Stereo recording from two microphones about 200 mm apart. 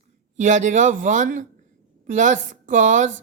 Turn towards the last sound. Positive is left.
turn(degrees=-40)  # may be behind; listen again after turning